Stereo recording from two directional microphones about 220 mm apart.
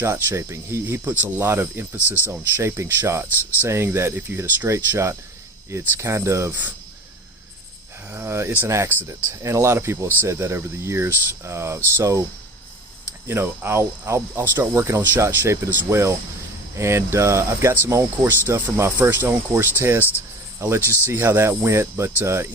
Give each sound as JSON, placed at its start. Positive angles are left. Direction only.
{"t": 0.0, "sound": "speech", "side_deg": -10}
{"t": 8.1, "sound": "speech", "side_deg": -10}
{"t": 13.2, "sound": "speech", "side_deg": -10}